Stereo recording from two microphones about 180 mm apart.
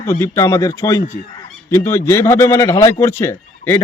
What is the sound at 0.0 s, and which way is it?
A man's voice, 15° left (ahead or behind).